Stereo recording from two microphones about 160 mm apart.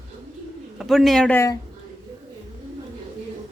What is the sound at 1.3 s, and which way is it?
Speech, 20° left (ahead or behind).